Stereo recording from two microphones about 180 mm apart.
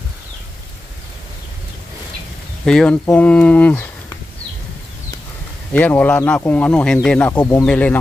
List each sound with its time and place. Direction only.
2.6 s speech: 5° left (ahead or behind)
5.7 s speech: 10° left (ahead or behind)